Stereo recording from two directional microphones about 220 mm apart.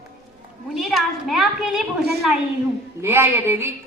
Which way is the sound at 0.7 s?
Centre (ahead or behind).